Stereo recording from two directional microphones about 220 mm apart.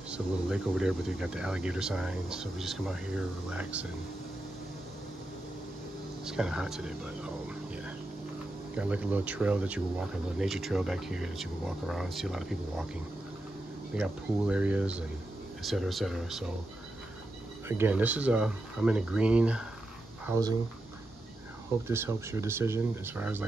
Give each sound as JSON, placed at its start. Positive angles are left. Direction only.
{"t": 0.1, "sound": "speech", "side_deg": -5}
{"t": 6.2, "sound": "speech", "side_deg": -5}
{"t": 8.7, "sound": "speech", "side_deg": -5}
{"t": 13.9, "sound": "speech", "side_deg": -5}
{"t": 17.6, "sound": "speech", "side_deg": -10}
{"t": 20.2, "sound": "speech", "side_deg": -15}
{"t": 21.8, "sound": "speech", "side_deg": -10}